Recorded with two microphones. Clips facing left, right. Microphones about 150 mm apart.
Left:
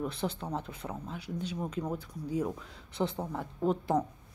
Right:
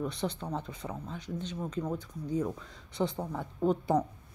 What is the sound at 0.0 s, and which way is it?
Speech, 5° left (ahead or behind).